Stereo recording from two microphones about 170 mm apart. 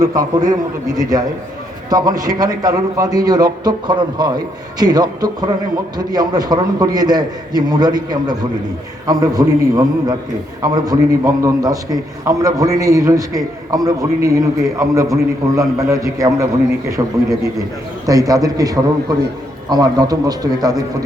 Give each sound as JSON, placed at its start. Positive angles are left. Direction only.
{"t": 0.0, "sound": "a man's voice", "side_deg": -20}